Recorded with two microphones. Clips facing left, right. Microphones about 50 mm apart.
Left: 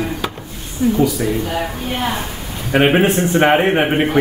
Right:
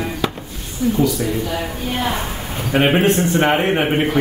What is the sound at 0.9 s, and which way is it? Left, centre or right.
Speech, centre.